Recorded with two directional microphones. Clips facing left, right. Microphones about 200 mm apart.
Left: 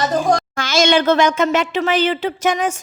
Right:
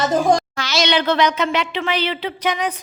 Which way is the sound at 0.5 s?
50° left (ahead or behind).